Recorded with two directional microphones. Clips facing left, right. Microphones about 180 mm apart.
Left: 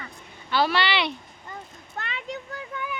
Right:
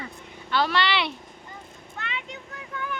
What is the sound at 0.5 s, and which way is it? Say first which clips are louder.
Speech: left 1 dB; 5° left (ahead or behind).